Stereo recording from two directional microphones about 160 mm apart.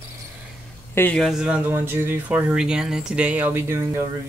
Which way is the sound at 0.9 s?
10° left (ahead or behind).